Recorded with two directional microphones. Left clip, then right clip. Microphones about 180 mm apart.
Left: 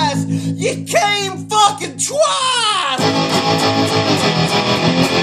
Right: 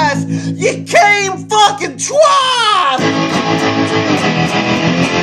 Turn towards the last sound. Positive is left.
turn(degrees=55)  # may be behind; listen again after turning